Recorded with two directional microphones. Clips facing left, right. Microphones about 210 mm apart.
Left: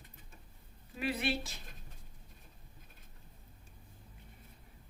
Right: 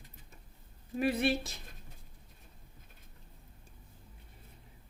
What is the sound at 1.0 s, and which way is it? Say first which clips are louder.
Speech: right 5 dB; 45° right (ahead or behind).